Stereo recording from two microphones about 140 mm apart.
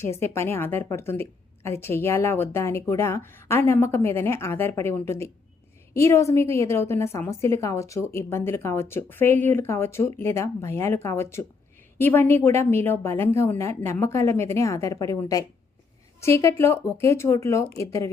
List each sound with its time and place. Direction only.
0.0 s a woman's voice: 20° left (ahead or behind)